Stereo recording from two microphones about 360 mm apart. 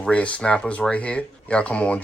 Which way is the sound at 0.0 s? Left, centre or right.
Centre.